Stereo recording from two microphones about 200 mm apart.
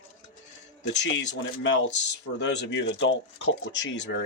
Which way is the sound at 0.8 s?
60° left (ahead or behind).